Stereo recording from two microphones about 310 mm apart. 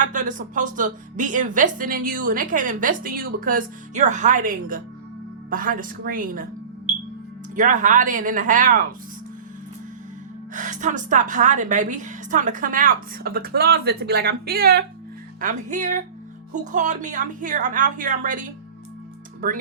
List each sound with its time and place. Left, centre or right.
0.1 s a woman's voice: right
7.5 s a woman's voice: right
10.5 s a woman's voice: right